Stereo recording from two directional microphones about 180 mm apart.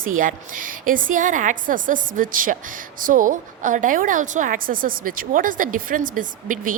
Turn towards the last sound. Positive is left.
turn(degrees=-50)  # may be behind; listen again after turning